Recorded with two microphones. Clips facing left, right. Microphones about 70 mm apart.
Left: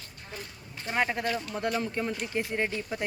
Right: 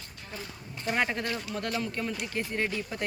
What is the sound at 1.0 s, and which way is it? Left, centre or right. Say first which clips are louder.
Speech: left 3 dB; centre.